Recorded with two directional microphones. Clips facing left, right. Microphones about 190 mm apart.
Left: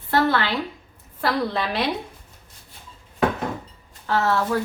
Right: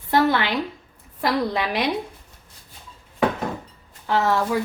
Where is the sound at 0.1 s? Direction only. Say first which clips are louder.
Right 1 dB; 15° right (ahead or behind).